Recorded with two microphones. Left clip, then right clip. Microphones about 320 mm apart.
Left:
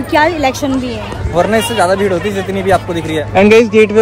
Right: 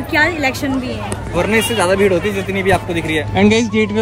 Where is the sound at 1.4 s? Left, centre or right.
Left.